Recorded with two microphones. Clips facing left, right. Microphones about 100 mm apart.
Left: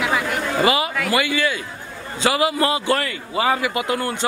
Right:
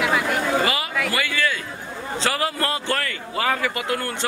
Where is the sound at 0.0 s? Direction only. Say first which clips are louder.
Even; centre (ahead or behind).